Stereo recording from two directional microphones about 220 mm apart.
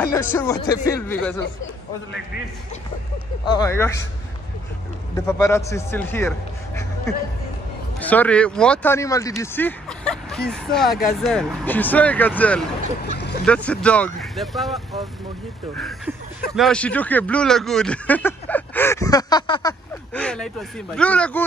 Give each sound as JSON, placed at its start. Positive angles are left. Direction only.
{"t": 0.0, "sound": "speech", "side_deg": 10}
{"t": 3.4, "sound": "speech", "side_deg": 15}
{"t": 5.1, "sound": "speech", "side_deg": 10}
{"t": 16.5, "sound": "speech", "side_deg": 5}
{"t": 20.2, "sound": "speech", "side_deg": 5}